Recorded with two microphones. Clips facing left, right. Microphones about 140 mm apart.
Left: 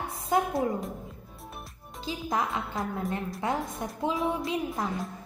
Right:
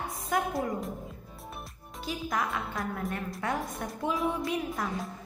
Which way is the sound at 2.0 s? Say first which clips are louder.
Left 2 dB; 25° left (ahead or behind).